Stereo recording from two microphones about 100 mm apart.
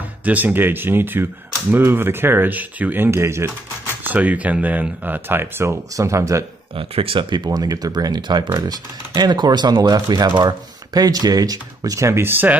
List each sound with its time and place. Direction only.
0.2 s speech: 15° right (ahead or behind)
4.0 s speech: 15° right (ahead or behind)
6.8 s speech: 65° right (ahead or behind); by 12.5 s 20° right (ahead or behind)